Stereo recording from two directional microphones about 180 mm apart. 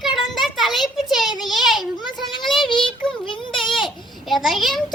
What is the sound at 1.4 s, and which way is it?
Speech, centre (ahead or behind).